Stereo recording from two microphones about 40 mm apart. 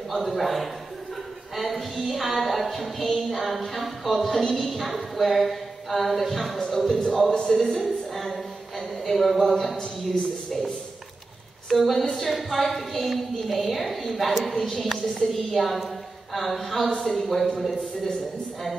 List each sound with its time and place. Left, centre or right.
0.1 s a woman's voice: centre
7.8 s a sound: centre
11.7 s a woman's voice: centre